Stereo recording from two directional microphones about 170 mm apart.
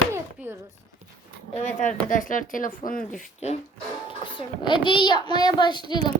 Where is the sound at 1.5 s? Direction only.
45° left (ahead or behind).